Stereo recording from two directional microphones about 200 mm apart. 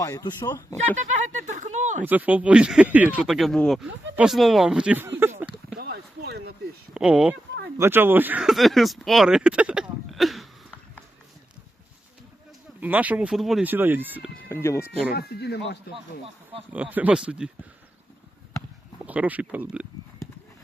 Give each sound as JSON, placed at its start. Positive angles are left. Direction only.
{"t": 0.0, "sound": "speech", "side_deg": 20}
{"t": 1.4, "sound": "a sound", "side_deg": -40}
{"t": 2.0, "sound": "speech", "side_deg": -10}
{"t": 5.7, "sound": "a sound", "side_deg": -55}
{"t": 6.9, "sound": "speech", "side_deg": -5}
{"t": 12.8, "sound": "speech", "side_deg": -5}
{"t": 14.5, "sound": "speech", "side_deg": 15}
{"t": 15.1, "sound": "speech", "side_deg": 50}
{"t": 16.2, "sound": "speech", "side_deg": -30}
{"t": 16.7, "sound": "speech", "side_deg": -5}
{"t": 19.0, "sound": "speech", "side_deg": -5}